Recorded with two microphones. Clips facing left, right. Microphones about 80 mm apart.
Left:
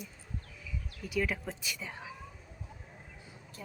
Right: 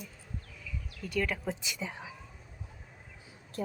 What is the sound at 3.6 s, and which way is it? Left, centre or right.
Speech, right.